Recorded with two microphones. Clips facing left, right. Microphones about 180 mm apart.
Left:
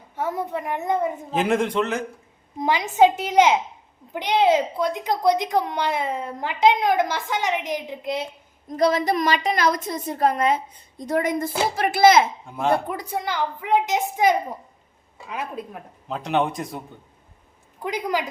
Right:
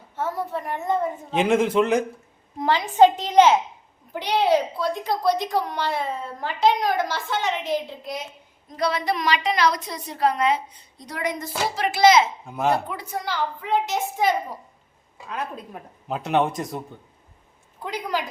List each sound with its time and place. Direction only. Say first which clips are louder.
0.2 s a woman's voice: left 1 dB; 20° left (ahead or behind)
1.3 s a man's voice: right 3 dB; centre (ahead or behind)
2.6 s a woman's voice: right 1 dB; 10° left (ahead or behind)
8.7 s a woman's voice: left 4 dB; 45° left (ahead or behind)
12.5 s a man's voice: right 1 dB; 5° right (ahead or behind)
12.7 s a woman's voice: left 3 dB; 50° left (ahead or behind)
13.1 s a woman's voice: left 1 dB; 20° left (ahead or behind)
16.0 s a man's voice: right 1 dB; 5° right (ahead or behind)